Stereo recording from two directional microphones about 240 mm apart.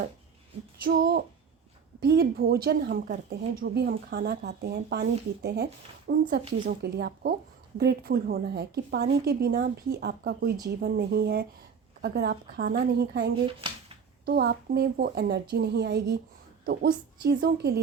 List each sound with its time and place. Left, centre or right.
0.9 s a woman's voice: right
13.4 s speech: right
14.3 s a woman's voice: right